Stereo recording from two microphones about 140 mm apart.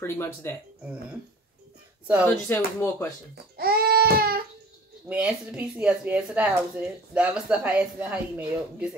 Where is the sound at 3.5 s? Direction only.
90° right.